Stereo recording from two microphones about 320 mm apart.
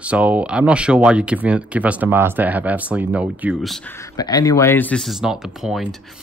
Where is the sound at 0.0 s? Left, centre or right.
Centre.